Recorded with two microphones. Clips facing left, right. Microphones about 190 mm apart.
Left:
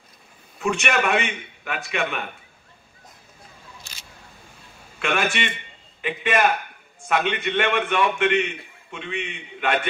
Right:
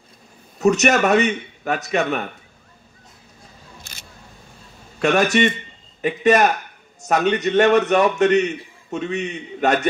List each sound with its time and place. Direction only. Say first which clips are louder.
0.6 s a man's voice: right 7 dB; 40° right (ahead or behind)
4.9 s a man's voice: right 8 dB; 40° right (ahead or behind)